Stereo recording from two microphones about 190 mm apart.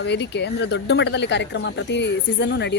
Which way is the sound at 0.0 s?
65° left (ahead or behind).